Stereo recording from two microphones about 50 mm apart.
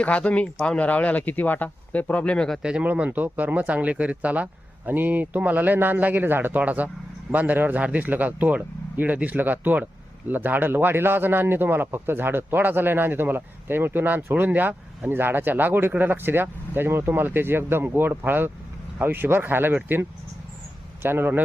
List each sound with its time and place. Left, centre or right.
0.0 s speech: left
2.6 s speech: centre
2.8 s speech: right
6.6 s a man's voice: right
15.1 s a man's voice: right